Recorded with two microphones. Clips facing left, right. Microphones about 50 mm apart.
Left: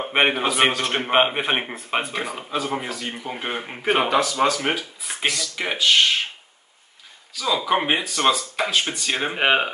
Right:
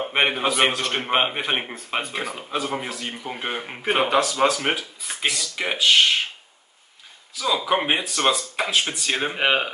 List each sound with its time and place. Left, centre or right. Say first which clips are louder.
0.0 s speech: left 1 dB; centre
7.3 s speech: left 1 dB; centre